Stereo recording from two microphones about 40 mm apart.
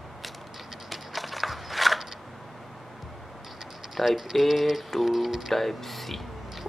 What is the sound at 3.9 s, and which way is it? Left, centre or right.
Speech, centre.